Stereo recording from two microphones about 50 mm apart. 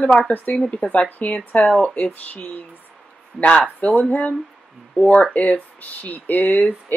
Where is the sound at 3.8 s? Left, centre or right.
Left.